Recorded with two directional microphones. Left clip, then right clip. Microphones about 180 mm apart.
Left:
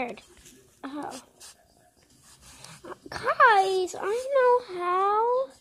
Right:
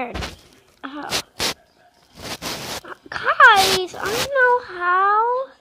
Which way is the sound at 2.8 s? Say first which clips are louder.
Right 5 dB; 10° left (ahead or behind).